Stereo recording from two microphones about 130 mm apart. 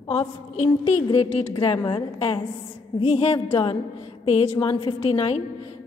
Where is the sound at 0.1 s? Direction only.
50° left (ahead or behind).